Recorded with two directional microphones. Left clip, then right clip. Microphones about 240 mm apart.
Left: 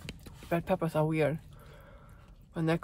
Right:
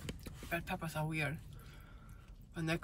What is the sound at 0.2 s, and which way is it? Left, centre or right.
Speech, centre.